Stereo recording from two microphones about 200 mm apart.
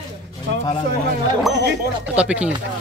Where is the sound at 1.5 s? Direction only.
65° right (ahead or behind).